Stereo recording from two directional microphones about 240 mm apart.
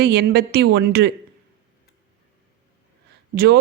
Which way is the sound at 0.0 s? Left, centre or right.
Right.